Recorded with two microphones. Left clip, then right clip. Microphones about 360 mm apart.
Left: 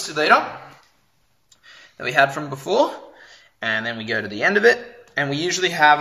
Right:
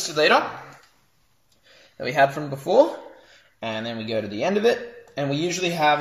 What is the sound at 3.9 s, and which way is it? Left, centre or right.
Speech, left.